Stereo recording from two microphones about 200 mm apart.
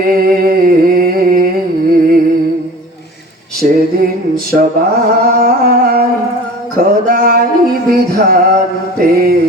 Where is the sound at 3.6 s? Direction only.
45° right (ahead or behind).